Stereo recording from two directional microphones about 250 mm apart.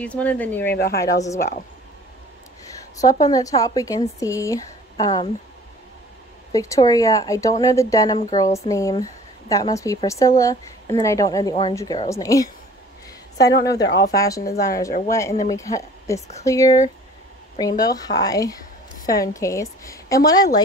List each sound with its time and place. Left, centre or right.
0.0 s speech: centre
0.7 s a woman's voice: left
1.0 s speech: centre
3.0 s speech: centre
6.5 s speech: centre
13.8 s speech: left
14.1 s a woman's voice: centre